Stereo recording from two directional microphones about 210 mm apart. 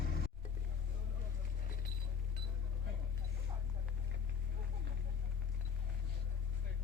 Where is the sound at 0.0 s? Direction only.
45° left (ahead or behind).